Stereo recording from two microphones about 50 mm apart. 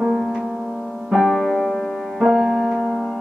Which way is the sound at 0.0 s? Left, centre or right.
Centre.